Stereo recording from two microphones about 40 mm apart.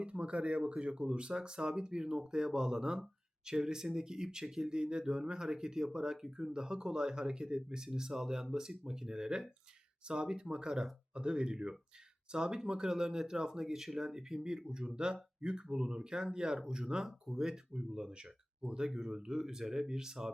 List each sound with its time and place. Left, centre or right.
0.0 s speech: right
17.0 s speech: centre